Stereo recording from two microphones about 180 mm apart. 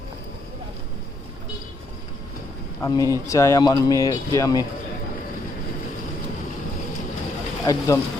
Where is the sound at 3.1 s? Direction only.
15° left (ahead or behind).